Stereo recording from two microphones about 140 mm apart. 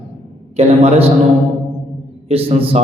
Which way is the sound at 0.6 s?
45° right (ahead or behind).